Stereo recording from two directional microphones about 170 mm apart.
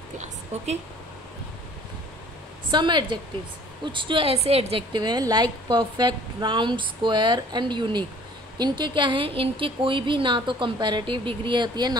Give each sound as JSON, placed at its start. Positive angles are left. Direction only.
{"t": 0.5, "sound": "speech", "side_deg": -40}
{"t": 2.7, "sound": "a woman's voice", "side_deg": -25}